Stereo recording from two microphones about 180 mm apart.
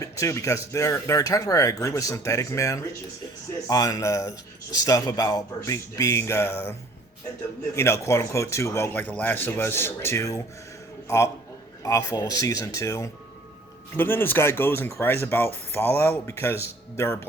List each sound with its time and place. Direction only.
0.0 s speech: 15° left (ahead or behind)
7.8 s speech: 15° left (ahead or behind)
11.8 s speech: 15° left (ahead or behind)